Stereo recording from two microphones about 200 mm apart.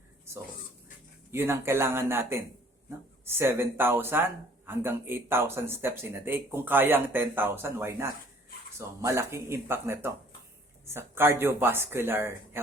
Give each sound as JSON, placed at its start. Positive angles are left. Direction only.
{"t": 1.3, "sound": "speech", "side_deg": -10}